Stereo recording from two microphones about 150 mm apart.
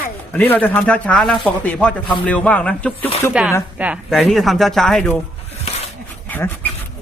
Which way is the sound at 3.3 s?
5° right (ahead or behind).